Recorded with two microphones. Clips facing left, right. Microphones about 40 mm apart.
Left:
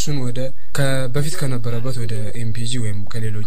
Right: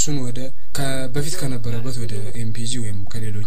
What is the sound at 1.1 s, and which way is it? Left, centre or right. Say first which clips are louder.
Speech: left 2 dB; centre.